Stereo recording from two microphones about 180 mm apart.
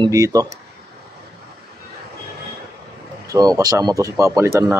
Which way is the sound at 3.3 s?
20° right (ahead or behind).